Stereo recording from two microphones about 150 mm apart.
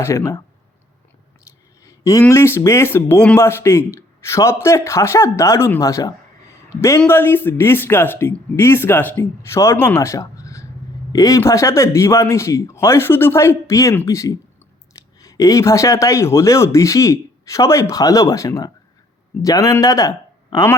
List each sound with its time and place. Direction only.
0.0 s speech: 20° left (ahead or behind)
1.8 s speech: 20° left (ahead or behind)